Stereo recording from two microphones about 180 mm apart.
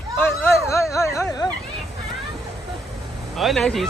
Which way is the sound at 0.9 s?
15° left (ahead or behind).